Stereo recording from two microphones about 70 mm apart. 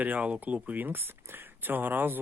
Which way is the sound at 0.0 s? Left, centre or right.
Centre.